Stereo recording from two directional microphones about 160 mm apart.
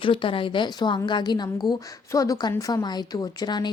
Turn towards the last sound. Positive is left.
turn(degrees=25)  # may be behind; listen again after turning